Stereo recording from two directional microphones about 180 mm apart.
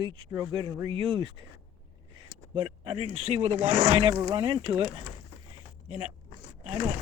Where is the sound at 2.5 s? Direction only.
30° right (ahead or behind).